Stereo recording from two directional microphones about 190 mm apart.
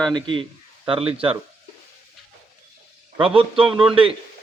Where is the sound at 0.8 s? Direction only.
30° right (ahead or behind).